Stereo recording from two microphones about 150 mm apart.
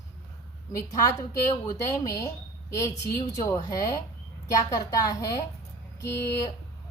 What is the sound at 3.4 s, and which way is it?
A woman's voice, 20° left (ahead or behind).